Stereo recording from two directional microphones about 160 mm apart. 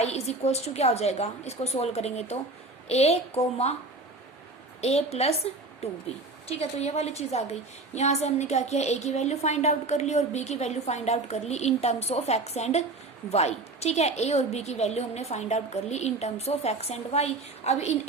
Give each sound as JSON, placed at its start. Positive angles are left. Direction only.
{"t": 0.0, "sound": "a woman's voice", "side_deg": 40}
{"t": 4.8, "sound": "a woman's voice", "side_deg": 40}